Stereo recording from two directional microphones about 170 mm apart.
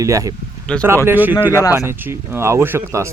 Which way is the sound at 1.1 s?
10° right (ahead or behind).